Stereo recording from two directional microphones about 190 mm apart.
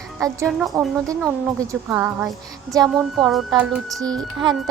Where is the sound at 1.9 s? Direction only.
10° right (ahead or behind).